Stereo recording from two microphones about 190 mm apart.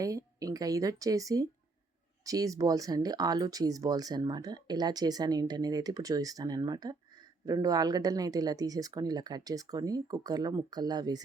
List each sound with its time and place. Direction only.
0.0 s speech: 20° right (ahead or behind)